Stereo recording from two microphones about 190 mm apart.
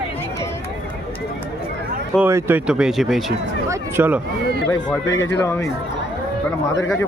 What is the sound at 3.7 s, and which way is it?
Speech, 10° right (ahead or behind).